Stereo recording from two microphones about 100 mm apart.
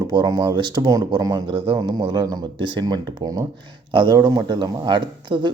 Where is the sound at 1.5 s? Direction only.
55° right (ahead or behind).